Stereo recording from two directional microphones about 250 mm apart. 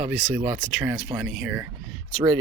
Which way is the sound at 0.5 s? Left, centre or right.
Centre.